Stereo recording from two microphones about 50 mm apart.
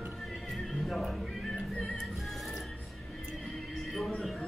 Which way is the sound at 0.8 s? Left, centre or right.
Centre.